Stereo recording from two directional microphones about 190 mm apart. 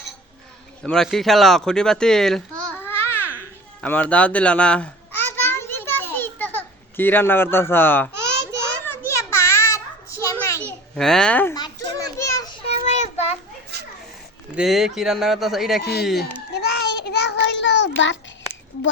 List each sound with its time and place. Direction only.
0.8 s speech: 5° left (ahead or behind)
2.6 s babbling: 10° left (ahead or behind)
8.8 s a sound: 10° left (ahead or behind)
10.9 s speech: 5° left (ahead or behind)
11.5 s children playing: 20° left (ahead or behind)
12.6 s child singing: 35° left (ahead or behind)
13.7 s children playing: 60° right (ahead or behind)
14.5 s speech: centre (ahead or behind)
15.8 s speech: 60° left (ahead or behind)
16.5 s child singing: 60° left (ahead or behind)